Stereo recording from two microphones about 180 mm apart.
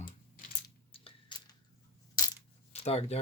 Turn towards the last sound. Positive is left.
turn(degrees=35)  # may be behind; listen again after turning